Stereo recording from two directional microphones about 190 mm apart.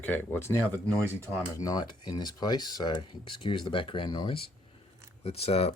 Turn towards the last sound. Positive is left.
turn(degrees=30)  # may be behind; listen again after turning